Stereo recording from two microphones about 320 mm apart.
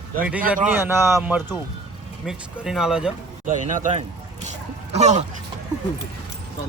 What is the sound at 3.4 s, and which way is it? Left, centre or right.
Speech, right.